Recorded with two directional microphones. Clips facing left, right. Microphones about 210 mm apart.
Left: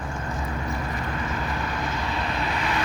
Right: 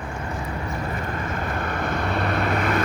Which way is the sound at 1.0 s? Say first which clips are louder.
Right 1 dB; 50° right (ahead or behind).